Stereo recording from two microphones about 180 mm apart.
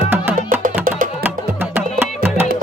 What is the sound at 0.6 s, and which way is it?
Music, 50° right (ahead or behind).